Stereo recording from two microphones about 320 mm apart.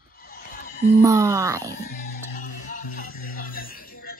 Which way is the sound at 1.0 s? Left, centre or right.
Centre.